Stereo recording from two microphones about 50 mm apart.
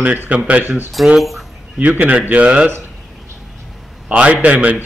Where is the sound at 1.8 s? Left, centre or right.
Right.